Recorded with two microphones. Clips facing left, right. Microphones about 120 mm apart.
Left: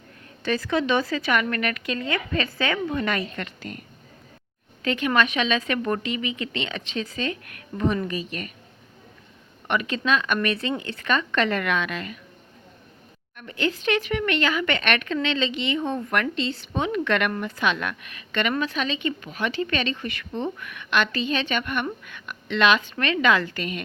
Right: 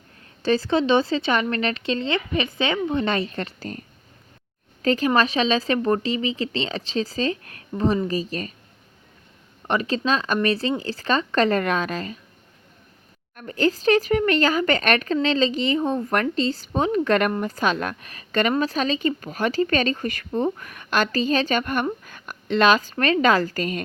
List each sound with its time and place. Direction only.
0.4 s speech: 30° right (ahead or behind)
9.6 s speech: 35° right (ahead or behind)
13.3 s speech: 40° right (ahead or behind)